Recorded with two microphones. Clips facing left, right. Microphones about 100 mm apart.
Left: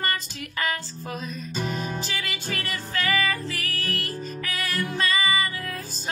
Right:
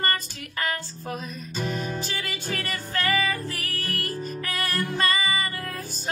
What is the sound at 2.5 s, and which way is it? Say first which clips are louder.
Music: right 1 dB; 45° right (ahead or behind).